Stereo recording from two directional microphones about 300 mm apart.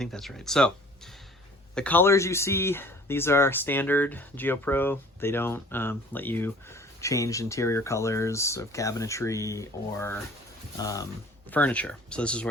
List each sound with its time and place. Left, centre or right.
0.0 s speech: centre
1.7 s speech: centre